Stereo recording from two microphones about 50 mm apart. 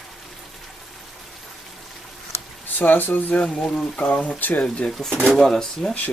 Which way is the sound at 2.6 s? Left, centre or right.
Left.